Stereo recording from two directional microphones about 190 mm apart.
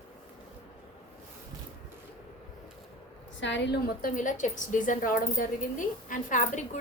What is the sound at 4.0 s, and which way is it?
Speech, 45° left (ahead or behind).